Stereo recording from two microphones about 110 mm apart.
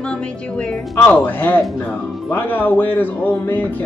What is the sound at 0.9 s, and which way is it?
Speech, 15° left (ahead or behind).